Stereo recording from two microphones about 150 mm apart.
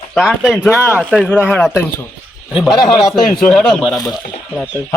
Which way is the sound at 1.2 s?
10° left (ahead or behind).